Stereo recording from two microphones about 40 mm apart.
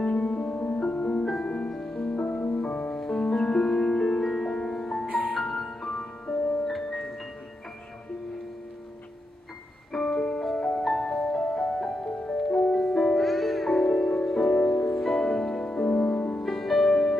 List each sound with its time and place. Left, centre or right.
0.0 s music: left
0.3 s music: centre
0.9 s music: left
1.7 s music: centre
2.0 s music: left
2.9 s music: centre
9.9 s music: centre
16.4 s music: centre
16.9 s music: centre